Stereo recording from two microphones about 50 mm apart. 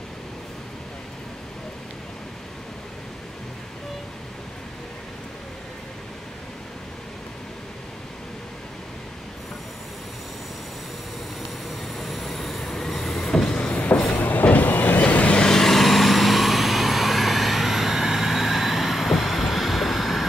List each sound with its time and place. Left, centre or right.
11.9 s train: centre
13.6 s train: left
14.1 s vehicle: left
15.5 s vehicle: centre